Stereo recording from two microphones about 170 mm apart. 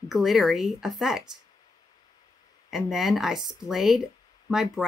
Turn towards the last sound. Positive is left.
turn(degrees=0)  # may be behind; listen again after turning